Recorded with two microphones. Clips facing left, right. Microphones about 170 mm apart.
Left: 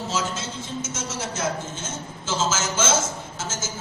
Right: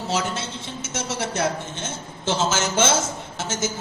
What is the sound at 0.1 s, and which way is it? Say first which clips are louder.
A woman's voice: right 5 dB; 65° right (ahead or behind).